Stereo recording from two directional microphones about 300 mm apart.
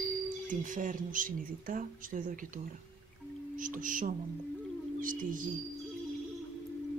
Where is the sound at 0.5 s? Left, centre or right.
Right.